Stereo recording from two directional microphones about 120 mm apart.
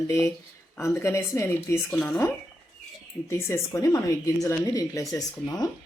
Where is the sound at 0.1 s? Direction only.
20° left (ahead or behind).